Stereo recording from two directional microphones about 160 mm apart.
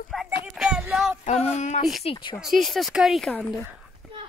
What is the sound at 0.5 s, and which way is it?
Child singing, 5° right (ahead or behind).